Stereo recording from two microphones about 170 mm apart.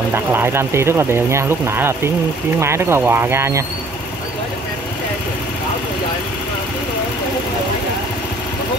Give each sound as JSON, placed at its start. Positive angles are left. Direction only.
{"t": 0.1, "sound": "speech", "side_deg": -15}